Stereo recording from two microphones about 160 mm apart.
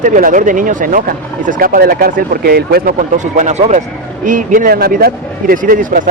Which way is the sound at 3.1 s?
50° right (ahead or behind).